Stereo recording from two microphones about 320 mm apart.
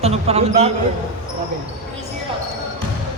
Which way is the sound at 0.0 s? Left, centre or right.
Centre.